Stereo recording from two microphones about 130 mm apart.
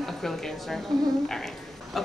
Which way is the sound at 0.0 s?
Centre (ahead or behind).